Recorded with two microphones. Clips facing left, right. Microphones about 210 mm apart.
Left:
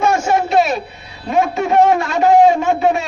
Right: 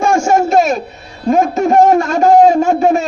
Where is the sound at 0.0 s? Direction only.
50° right (ahead or behind).